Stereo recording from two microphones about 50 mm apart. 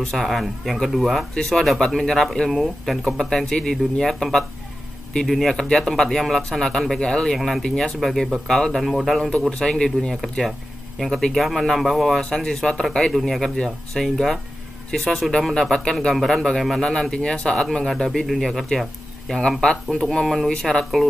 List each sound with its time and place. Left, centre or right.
0.1 s speech: centre
1.3 s a man's voice: centre
7.3 s speech: centre
7.6 s a man's voice: centre
9.6 s a man's voice: centre
12.4 s a man's voice: centre
16.1 s a man's voice: centre
20.4 s a man's voice: centre